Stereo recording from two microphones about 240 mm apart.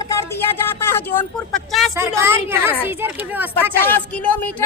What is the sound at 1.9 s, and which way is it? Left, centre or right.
Speech, centre.